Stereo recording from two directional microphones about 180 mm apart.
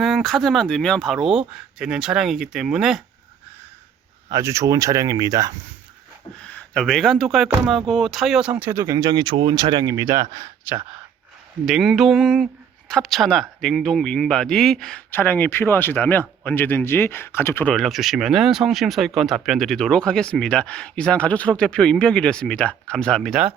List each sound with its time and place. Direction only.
0.0 s speech: centre (ahead or behind)
4.3 s speech: 15° right (ahead or behind)
6.4 s speech: 5° left (ahead or behind); by 10.8 s 20° right (ahead or behind)
11.6 s speech: centre (ahead or behind)